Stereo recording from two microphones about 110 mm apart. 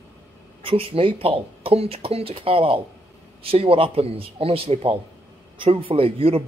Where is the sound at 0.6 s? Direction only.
55° right (ahead or behind).